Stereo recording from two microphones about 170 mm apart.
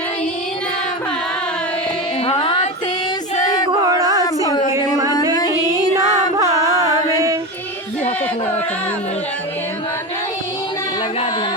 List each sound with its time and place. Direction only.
2.2 s music: 30° left (ahead or behind)
3.7 s a sound: 20° right (ahead or behind)
5.3 s music: 25° left (ahead or behind)
6.0 s music: 20° right (ahead or behind)